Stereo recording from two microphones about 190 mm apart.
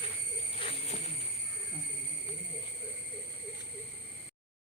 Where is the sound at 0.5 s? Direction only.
30° left (ahead or behind).